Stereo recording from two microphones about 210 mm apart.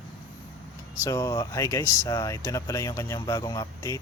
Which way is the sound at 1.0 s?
15° left (ahead or behind).